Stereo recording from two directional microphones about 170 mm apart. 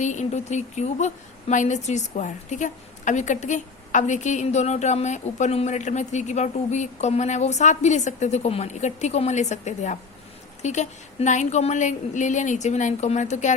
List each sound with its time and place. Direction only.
0.0 s a woman's voice: 45° left (ahead or behind)